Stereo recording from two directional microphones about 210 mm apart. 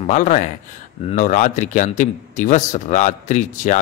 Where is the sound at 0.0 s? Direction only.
35° left (ahead or behind).